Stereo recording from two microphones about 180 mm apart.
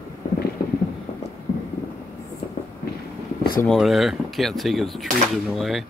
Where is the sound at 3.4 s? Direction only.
55° left (ahead or behind).